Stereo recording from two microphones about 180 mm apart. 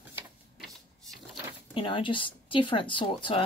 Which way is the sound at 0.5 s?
Centre (ahead or behind).